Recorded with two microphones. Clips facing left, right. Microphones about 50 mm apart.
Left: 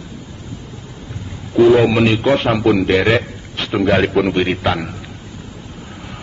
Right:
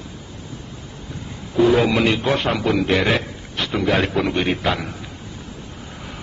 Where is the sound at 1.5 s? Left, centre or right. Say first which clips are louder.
Left 5 dB; centre.